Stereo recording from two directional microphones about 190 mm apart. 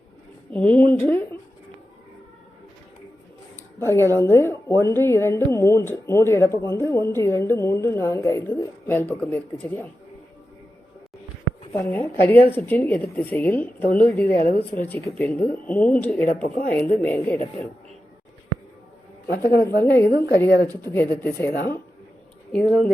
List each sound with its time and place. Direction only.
0.5 s speech: 5° left (ahead or behind)
3.8 s speech: 15° left (ahead or behind)
11.7 s speech: 10° left (ahead or behind)
14.3 s speech: 55° left (ahead or behind)
14.8 s speech: 10° left (ahead or behind)
16.3 s speech: 50° left (ahead or behind)
16.7 s speech: 10° left (ahead or behind)
19.3 s speech: 55° left (ahead or behind)
20.8 s speech: 10° left (ahead or behind)
22.5 s speech: centre (ahead or behind)